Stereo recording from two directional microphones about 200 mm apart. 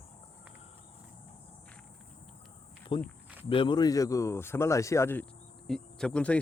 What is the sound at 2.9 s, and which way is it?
Speech, 25° left (ahead or behind).